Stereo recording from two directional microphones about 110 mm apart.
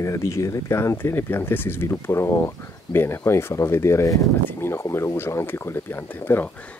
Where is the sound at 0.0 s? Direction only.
25° left (ahead or behind).